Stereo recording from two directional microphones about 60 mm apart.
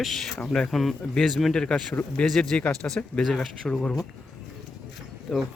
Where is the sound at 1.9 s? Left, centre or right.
Left.